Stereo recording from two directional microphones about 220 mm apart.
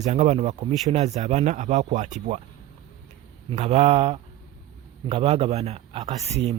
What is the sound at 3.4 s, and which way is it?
A man's voice, 30° right (ahead or behind).